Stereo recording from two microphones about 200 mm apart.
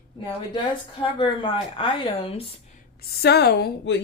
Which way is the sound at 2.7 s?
50° left (ahead or behind).